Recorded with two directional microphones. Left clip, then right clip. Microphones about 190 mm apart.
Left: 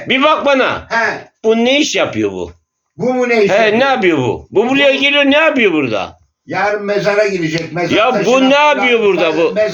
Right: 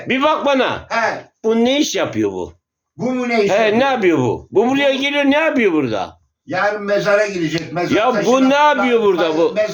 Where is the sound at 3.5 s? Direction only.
15° right (ahead or behind).